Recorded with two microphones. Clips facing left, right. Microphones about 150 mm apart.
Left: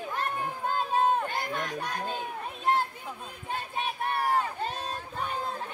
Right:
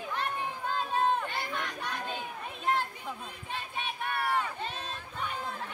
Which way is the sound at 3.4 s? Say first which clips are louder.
Left 5 dB; 40° left (ahead or behind).